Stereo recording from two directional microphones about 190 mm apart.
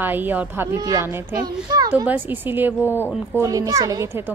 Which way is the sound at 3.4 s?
20° right (ahead or behind).